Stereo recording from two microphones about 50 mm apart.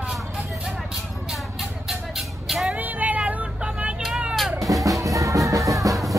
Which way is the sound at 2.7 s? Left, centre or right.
Right.